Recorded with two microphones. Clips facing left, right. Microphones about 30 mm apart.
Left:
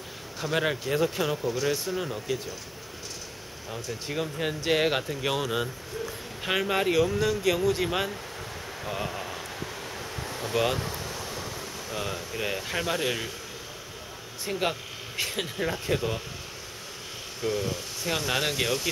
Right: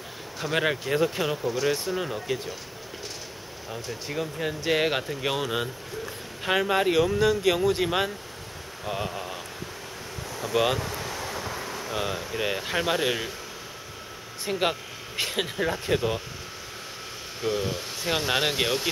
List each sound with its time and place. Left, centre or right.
0.4 s speech: centre
3.7 s speech: centre
4.7 s speech: centre
10.2 s a sound: left
10.5 s speech: centre
10.9 s a sound: right
11.9 s speech: centre
14.4 s speech: centre
17.4 s speech: centre